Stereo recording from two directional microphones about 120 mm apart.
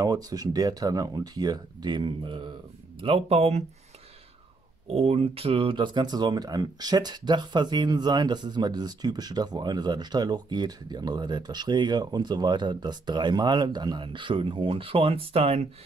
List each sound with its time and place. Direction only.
0.0 s speech: 30° right (ahead or behind); by 3.6 s 60° right (ahead or behind)
4.8 s speech: 55° right (ahead or behind)